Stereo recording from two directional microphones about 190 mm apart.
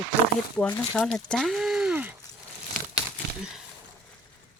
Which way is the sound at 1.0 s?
5° left (ahead or behind).